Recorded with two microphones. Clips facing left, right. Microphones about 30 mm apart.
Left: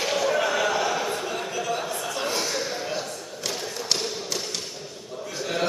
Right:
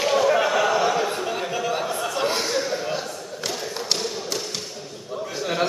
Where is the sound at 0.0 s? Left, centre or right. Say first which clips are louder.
Right 4 dB; centre.